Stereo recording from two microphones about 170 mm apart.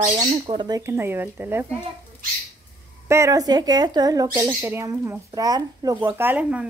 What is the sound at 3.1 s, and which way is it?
A woman's voice, 20° right (ahead or behind).